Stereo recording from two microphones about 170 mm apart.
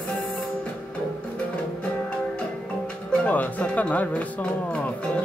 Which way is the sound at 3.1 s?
5° left (ahead or behind).